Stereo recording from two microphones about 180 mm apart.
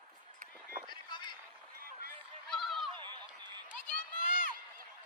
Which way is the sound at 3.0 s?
25° right (ahead or behind).